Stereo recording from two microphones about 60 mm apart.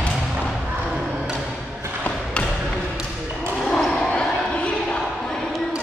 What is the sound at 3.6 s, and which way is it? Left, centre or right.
Basketball bounce, centre.